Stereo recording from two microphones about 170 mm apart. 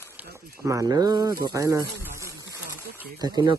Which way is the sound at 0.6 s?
20° right (ahead or behind).